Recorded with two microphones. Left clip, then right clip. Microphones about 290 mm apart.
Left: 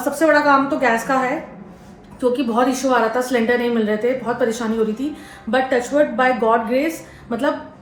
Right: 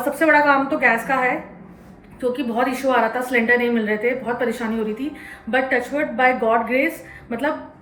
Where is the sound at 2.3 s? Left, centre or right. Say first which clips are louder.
Left 3 dB; centre.